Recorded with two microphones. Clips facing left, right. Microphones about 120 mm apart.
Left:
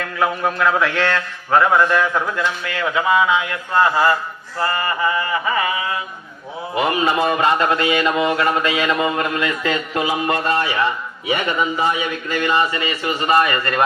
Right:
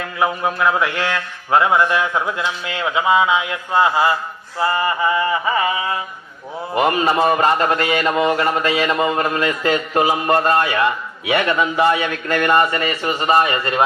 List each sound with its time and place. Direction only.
0.0 s a sound: 15° right (ahead or behind)
2.6 s speech: 20° right (ahead or behind)
6.7 s mantra: 40° right (ahead or behind)
13.1 s speech: 30° right (ahead or behind)